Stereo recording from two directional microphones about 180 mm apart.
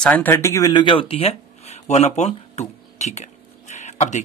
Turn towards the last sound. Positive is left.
turn(degrees=40)  # may be behind; listen again after turning